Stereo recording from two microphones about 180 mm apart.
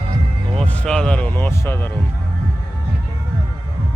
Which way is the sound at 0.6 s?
5° left (ahead or behind).